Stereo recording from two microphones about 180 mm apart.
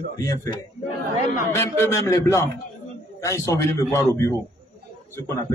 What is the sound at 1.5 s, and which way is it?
A man's voice, 15° left (ahead or behind).